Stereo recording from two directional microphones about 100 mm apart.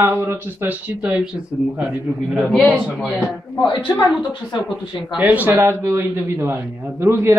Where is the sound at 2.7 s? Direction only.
10° right (ahead or behind).